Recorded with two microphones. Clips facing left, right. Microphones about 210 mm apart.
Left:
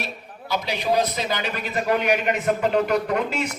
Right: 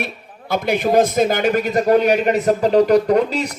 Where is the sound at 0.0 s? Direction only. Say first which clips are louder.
Right 5 dB; 55° right (ahead or behind).